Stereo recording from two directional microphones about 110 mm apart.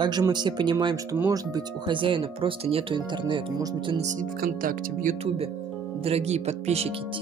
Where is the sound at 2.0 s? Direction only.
50° right (ahead or behind).